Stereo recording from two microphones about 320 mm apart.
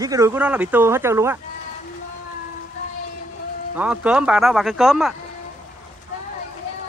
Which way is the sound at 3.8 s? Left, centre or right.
Centre.